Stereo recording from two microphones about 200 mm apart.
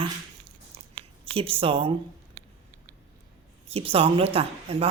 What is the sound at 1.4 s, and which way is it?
Speech, 25° right (ahead or behind).